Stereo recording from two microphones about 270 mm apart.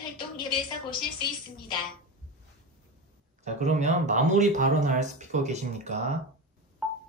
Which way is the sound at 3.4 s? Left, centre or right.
Right.